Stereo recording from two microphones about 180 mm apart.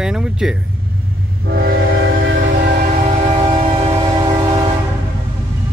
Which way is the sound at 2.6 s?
50° right (ahead or behind).